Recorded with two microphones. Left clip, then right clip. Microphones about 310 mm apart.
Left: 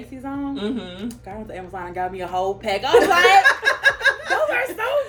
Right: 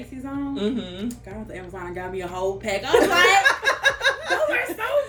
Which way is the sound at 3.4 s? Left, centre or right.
Centre.